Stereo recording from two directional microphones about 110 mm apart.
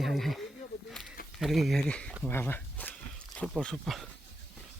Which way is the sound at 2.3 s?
20° left (ahead or behind).